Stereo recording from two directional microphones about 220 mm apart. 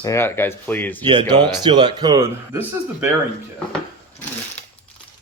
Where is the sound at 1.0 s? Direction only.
20° right (ahead or behind).